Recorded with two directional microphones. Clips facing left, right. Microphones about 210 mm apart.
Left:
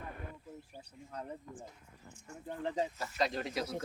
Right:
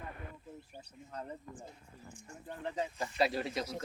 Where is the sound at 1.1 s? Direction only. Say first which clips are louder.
Even; centre (ahead or behind).